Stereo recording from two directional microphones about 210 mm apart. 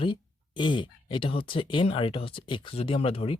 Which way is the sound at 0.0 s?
25° left (ahead or behind).